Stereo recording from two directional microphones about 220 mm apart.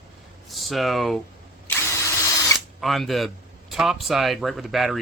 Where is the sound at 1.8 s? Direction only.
15° left (ahead or behind).